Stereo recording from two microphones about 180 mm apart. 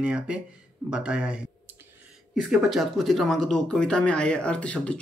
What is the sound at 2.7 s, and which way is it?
Speech, centre (ahead or behind).